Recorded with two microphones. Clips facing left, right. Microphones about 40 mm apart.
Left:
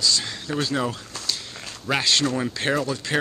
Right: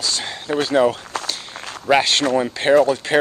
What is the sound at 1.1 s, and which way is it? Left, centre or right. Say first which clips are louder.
Walk: right 4 dB; right.